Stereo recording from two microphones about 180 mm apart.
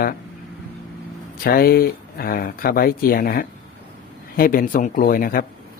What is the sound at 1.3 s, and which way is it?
A man's voice, 55° left (ahead or behind).